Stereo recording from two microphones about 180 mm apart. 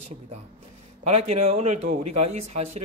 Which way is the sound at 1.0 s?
40° right (ahead or behind).